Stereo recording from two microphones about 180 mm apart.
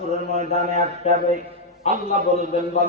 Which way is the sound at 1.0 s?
35° left (ahead or behind).